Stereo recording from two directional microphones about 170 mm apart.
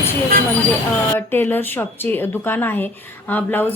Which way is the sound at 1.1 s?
10° left (ahead or behind).